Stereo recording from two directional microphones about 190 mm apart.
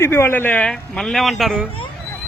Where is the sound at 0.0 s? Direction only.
15° left (ahead or behind).